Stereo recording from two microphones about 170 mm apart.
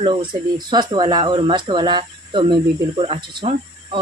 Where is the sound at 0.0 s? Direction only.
30° right (ahead or behind).